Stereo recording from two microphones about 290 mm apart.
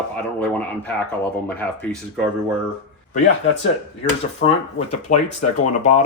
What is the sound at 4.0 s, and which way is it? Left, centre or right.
Speech, left.